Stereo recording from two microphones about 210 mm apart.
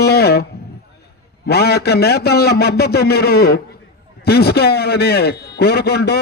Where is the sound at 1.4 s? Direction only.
50° left (ahead or behind).